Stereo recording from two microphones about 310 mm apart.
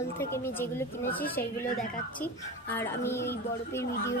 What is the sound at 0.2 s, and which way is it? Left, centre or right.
A woman's voice, centre.